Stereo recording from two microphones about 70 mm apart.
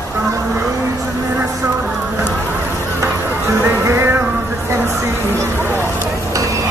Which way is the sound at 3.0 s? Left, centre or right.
Right.